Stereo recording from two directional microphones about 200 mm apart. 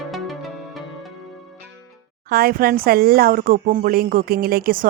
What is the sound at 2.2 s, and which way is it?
A woman's voice, 50° right (ahead or behind).